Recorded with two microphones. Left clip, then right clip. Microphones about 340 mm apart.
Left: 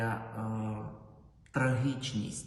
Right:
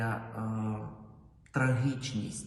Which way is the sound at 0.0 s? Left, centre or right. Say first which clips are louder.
Even; centre.